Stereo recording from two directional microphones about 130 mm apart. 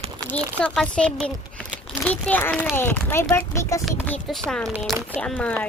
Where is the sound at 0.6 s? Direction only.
5° left (ahead or behind).